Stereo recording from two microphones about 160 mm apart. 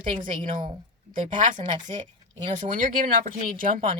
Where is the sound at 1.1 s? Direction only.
55° right (ahead or behind).